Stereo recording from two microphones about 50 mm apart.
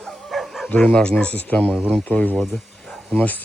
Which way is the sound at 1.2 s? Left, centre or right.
Left.